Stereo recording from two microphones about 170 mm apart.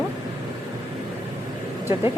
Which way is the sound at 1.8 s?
15° right (ahead or behind).